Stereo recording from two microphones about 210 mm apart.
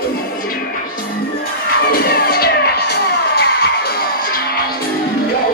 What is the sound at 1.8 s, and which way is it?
Music, 45° left (ahead or behind).